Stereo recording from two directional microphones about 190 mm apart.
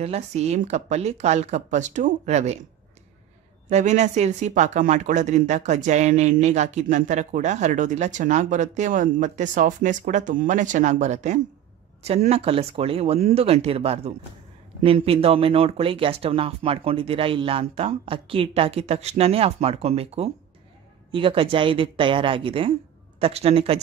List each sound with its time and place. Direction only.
0.0 s speech: 35° right (ahead or behind)
3.7 s speech: 35° right (ahead or behind)